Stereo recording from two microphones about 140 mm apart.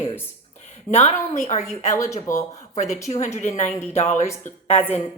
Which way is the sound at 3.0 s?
55° left (ahead or behind).